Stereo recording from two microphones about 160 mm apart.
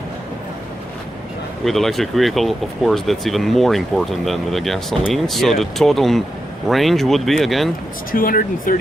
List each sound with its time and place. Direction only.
1.6 s speech: centre (ahead or behind)
8.1 s speech: 65° left (ahead or behind)